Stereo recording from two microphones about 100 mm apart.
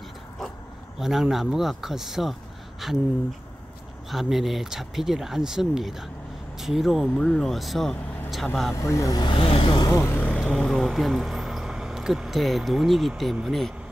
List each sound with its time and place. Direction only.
0.9 s speech: 5° right (ahead or behind)
4.1 s speech: centre (ahead or behind)
8.7 s speech: 30° left (ahead or behind)
9.2 s speech: 60° left (ahead or behind)
9.9 s speech: 25° left (ahead or behind)
10.2 s speech: 5° left (ahead or behind)